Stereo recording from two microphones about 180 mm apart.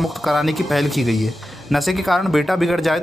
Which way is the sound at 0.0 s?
Centre (ahead or behind).